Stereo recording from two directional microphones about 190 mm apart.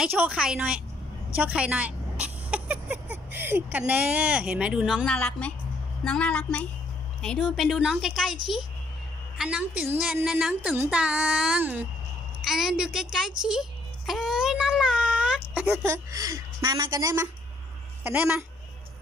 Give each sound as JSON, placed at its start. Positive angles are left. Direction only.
{"t": 0.0, "sound": "a woman's voice", "side_deg": -5}
{"t": 9.4, "sound": "a woman's voice", "side_deg": -5}